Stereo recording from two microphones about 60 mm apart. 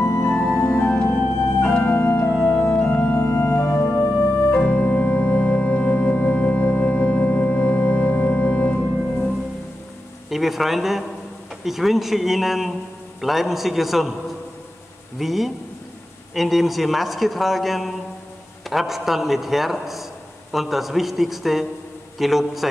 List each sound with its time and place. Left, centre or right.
0.0 s music: left
0.4 s music: left
1.1 s organ: centre
2.3 s music: centre
2.6 s organ: left
10.3 s a man's voice: centre
15.1 s a man's voice: centre